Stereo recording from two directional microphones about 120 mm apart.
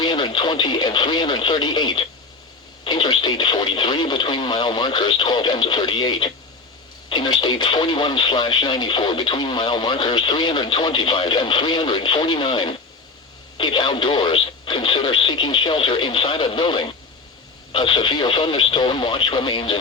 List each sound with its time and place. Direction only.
0.0 s radio: 40° left (ahead or behind)
7.1 s speech: 40° left (ahead or behind)